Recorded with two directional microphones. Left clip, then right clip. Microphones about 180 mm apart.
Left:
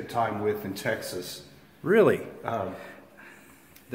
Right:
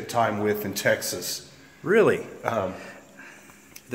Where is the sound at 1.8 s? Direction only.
15° left (ahead or behind).